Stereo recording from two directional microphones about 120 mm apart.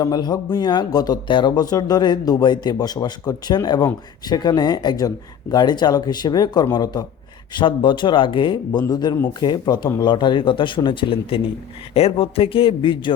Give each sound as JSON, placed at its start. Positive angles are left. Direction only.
{"t": 0.0, "sound": "speech", "side_deg": 35}